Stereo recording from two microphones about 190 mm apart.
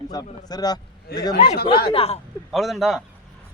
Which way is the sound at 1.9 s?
30° left (ahead or behind).